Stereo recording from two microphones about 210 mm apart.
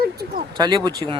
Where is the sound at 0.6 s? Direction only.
20° right (ahead or behind).